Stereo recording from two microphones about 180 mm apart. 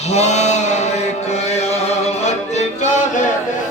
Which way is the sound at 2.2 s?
40° left (ahead or behind).